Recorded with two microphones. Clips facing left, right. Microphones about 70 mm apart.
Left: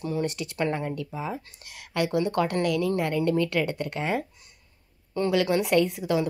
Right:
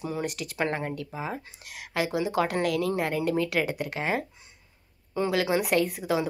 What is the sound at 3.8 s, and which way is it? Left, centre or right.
Speech, right.